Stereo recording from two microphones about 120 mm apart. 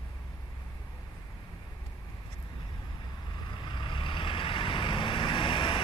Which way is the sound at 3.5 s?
40° left (ahead or behind).